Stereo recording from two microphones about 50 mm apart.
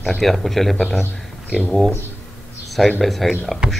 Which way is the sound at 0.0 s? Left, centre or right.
Centre.